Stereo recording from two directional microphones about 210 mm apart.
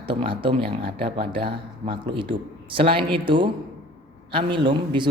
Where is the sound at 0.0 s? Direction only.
25° right (ahead or behind).